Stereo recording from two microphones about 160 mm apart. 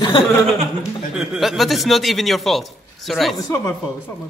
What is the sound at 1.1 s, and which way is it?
Speech, 5° right (ahead or behind).